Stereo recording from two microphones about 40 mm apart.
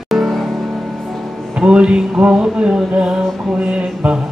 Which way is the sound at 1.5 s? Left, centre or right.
Right.